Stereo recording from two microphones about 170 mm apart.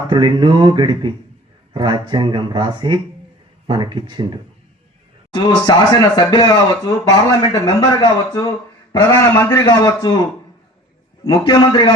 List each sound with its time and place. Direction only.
0.1 s speech: 25° right (ahead or behind)
5.3 s a man's voice: 25° left (ahead or behind)
11.2 s a man's voice: 30° left (ahead or behind)